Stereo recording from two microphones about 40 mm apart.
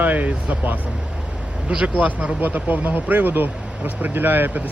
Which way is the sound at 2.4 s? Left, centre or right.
Right.